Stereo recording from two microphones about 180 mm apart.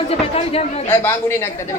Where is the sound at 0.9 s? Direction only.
15° left (ahead or behind).